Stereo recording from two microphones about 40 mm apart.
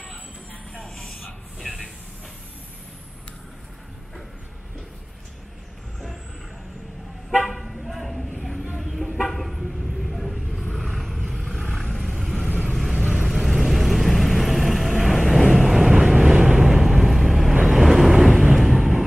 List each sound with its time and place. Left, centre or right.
0.8 s a sound: centre
1.6 s hiss: centre
7.4 s toot: centre
8.9 s vehicle: centre
12.9 s vehicle: centre
13.3 s vehicle: centre
15.8 s vehicle: centre
16.8 s vehicle: centre